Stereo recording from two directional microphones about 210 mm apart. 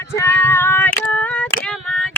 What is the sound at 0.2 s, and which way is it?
Female singing, 10° left (ahead or behind).